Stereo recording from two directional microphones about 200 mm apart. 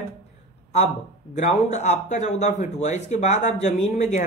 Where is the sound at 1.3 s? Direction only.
35° left (ahead or behind).